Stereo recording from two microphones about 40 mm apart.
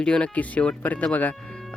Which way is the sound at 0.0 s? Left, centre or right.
Left.